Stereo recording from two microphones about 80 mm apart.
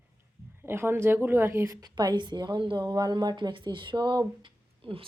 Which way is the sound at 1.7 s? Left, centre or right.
Right.